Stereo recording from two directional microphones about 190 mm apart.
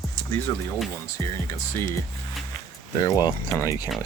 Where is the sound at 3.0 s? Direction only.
15° left (ahead or behind).